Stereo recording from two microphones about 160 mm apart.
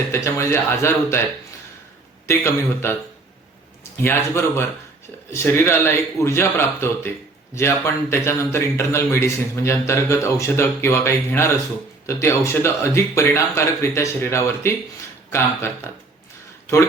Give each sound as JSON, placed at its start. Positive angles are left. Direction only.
{"t": 0.1, "sound": "a man's voice", "side_deg": 15}
{"t": 2.2, "sound": "a man's voice", "side_deg": 15}
{"t": 4.0, "sound": "a man's voice", "side_deg": 15}
{"t": 8.1, "sound": "a man's voice", "side_deg": 15}